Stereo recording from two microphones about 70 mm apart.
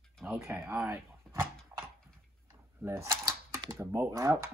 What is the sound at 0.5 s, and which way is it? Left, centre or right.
Speech, right.